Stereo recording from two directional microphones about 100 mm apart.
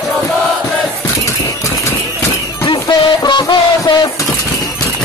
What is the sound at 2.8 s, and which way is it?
Music, 45° left (ahead or behind).